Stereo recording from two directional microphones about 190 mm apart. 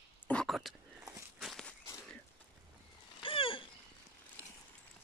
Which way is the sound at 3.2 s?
25° left (ahead or behind).